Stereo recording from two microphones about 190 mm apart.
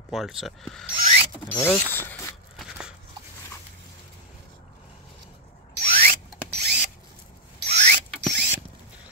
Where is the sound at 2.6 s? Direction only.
5° right (ahead or behind).